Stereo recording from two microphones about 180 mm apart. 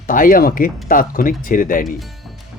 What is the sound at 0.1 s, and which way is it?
Speech, 50° left (ahead or behind).